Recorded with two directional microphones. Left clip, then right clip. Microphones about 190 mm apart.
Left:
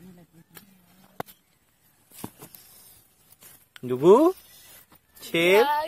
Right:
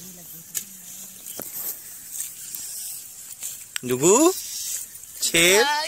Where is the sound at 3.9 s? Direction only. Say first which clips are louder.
Left 1 dB; 15° right (ahead or behind).